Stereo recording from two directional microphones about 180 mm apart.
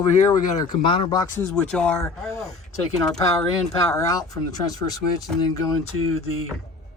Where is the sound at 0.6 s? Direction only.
25° left (ahead or behind); by 2.0 s 5° left (ahead or behind).